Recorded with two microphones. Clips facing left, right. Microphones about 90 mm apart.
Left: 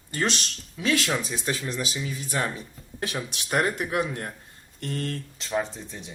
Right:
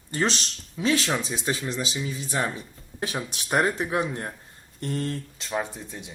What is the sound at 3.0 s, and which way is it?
Speech, 30° right (ahead or behind).